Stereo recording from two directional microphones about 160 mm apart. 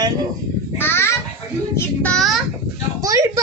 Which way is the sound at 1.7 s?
10° left (ahead or behind).